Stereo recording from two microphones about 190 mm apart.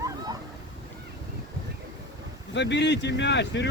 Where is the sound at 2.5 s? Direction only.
65° left (ahead or behind).